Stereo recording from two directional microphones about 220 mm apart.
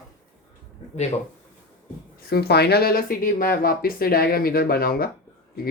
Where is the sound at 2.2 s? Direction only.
45° left (ahead or behind).